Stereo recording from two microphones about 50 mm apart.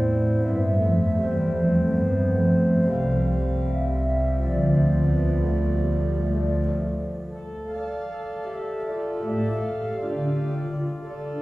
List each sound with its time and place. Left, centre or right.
0.0 s music: centre
10.0 s organ: centre